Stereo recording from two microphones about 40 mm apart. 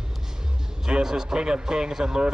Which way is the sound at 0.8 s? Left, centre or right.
Centre.